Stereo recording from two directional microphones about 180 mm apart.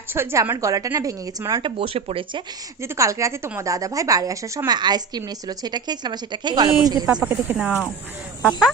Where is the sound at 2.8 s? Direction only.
15° right (ahead or behind).